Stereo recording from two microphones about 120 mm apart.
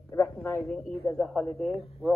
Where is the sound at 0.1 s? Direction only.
20° left (ahead or behind).